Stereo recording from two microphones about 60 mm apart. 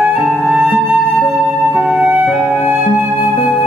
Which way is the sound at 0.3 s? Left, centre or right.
Centre.